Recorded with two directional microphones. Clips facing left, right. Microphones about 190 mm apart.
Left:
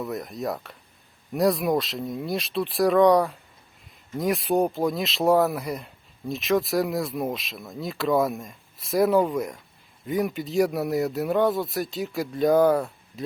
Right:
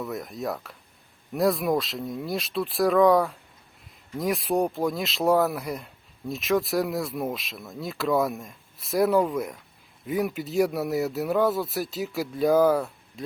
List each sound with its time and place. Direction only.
0.0 s speech: centre (ahead or behind)